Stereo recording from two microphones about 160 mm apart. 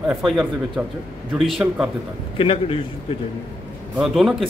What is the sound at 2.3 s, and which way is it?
Speech, 35° left (ahead or behind).